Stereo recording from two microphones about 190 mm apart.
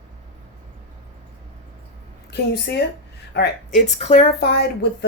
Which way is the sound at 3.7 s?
35° left (ahead or behind).